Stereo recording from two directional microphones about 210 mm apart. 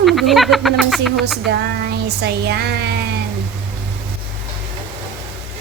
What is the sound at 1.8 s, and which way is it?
Speech, 50° right (ahead or behind).